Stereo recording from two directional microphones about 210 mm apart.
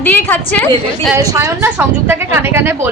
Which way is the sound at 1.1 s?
15° right (ahead or behind).